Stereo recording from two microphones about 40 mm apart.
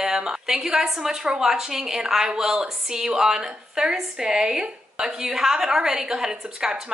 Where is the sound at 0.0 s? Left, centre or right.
Centre.